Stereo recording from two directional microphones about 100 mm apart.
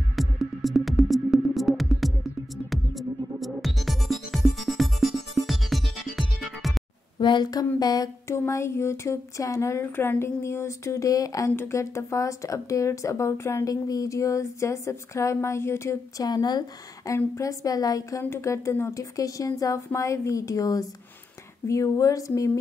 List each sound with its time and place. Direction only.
0.1 s music: centre (ahead or behind)
7.2 s speech: 50° left (ahead or behind)
8.3 s speech: 25° left (ahead or behind)
16.3 s speech: 40° left (ahead or behind)